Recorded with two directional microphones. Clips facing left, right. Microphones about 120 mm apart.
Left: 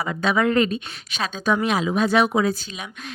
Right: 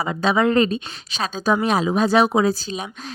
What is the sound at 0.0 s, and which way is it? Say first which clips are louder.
Speech: right 2 dB; 30° right (ahead or behind).